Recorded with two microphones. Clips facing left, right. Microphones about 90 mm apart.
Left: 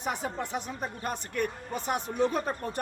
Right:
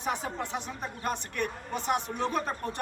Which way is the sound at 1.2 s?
90° right.